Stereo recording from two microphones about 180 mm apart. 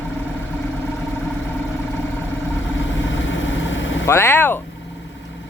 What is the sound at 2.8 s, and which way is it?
Vehicle, 90° left.